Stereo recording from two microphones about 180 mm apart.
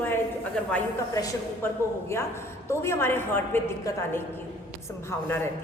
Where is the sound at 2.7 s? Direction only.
15° left (ahead or behind).